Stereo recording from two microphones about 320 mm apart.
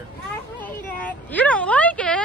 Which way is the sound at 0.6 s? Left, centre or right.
Centre.